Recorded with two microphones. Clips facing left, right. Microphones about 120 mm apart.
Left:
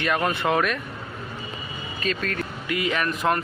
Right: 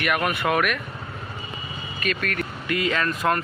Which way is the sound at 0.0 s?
25° left (ahead or behind).